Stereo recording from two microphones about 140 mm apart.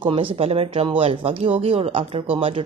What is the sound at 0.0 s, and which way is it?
Speech, 40° right (ahead or behind).